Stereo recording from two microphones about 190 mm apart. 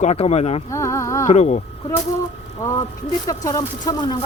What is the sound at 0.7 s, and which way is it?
Music, 15° left (ahead or behind).